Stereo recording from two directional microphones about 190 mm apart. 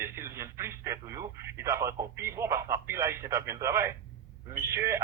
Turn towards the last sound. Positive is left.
turn(degrees=-15)  # may be behind; listen again after turning